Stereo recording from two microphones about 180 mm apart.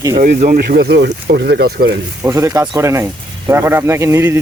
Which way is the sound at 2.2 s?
15° right (ahead or behind).